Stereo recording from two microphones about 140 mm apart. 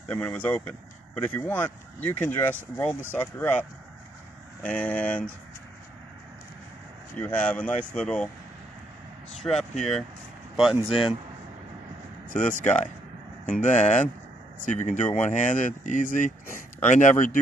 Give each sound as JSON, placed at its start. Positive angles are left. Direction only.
{"t": 0.1, "sound": "speech", "side_deg": 10}
{"t": 4.6, "sound": "speech", "side_deg": 10}
{"t": 7.2, "sound": "speech", "side_deg": 10}
{"t": 9.4, "sound": "speech", "side_deg": 0}
{"t": 10.9, "sound": "speech", "side_deg": 40}
{"t": 12.3, "sound": "speech", "side_deg": 65}
{"t": 15.1, "sound": "speech", "side_deg": 60}